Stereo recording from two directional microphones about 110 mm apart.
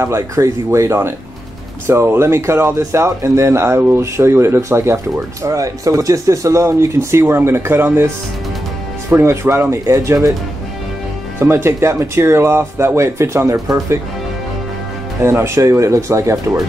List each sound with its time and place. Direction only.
0.0 s speech: 25° right (ahead or behind)
9.1 s speech: 25° right (ahead or behind)
11.3 s speech: 20° right (ahead or behind)
15.2 s speech: 25° right (ahead or behind)